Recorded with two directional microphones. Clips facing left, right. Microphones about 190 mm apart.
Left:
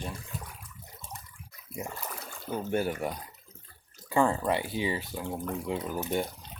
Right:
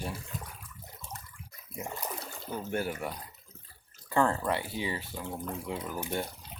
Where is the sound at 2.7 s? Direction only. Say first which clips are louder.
Left 4 dB; 20° left (ahead or behind).